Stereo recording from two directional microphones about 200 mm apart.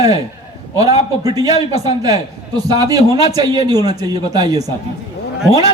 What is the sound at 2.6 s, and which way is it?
A man's voice, 20° right (ahead or behind).